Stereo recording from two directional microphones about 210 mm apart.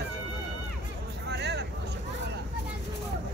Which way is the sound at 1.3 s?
55° right (ahead or behind).